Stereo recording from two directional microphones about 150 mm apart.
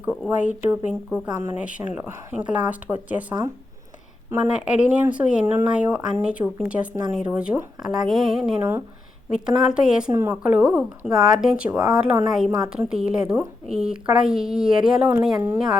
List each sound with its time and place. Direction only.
0.0 s a woman's voice: 10° right (ahead or behind)
12.5 s a woman's voice: 25° right (ahead or behind)
12.7 s a woman's voice: 5° right (ahead or behind)